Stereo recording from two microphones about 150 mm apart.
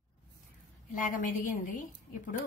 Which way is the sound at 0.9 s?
65° left (ahead or behind).